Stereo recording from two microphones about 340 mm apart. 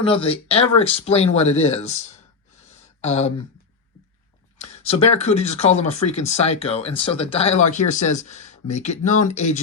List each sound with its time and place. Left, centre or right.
0.0 s speech: centre
3.0 s speech: centre
4.5 s speech: centre